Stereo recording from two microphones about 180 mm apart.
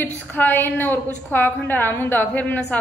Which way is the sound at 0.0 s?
10° left (ahead or behind).